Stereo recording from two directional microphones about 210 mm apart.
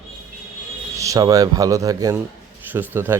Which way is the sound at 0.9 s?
15° right (ahead or behind).